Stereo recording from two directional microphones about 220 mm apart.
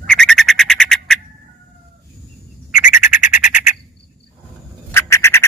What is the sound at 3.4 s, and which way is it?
Bird, 35° left (ahead or behind).